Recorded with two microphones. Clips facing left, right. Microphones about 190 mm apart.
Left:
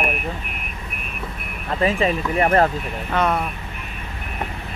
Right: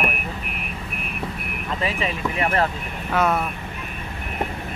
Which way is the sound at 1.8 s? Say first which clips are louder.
Left 7 dB; 40° left (ahead or behind).